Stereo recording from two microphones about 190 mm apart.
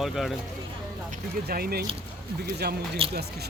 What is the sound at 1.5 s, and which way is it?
Speech, 55° right (ahead or behind).